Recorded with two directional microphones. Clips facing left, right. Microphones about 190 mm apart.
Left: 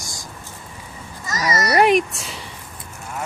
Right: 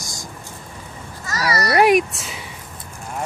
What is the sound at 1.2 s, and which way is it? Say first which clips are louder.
Speech: even; 20° left (ahead or behind).